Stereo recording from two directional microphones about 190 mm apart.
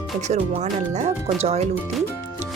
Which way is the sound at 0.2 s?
40° right (ahead or behind).